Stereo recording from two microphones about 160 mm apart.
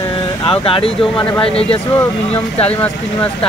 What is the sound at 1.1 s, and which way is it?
Speech, 10° left (ahead or behind).